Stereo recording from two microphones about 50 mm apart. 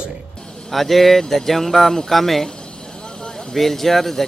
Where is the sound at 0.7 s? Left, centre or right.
Centre.